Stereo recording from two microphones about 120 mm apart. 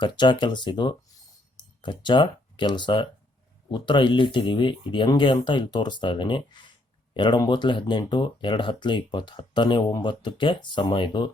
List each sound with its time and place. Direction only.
0.0 s speech: 40° left (ahead or behind)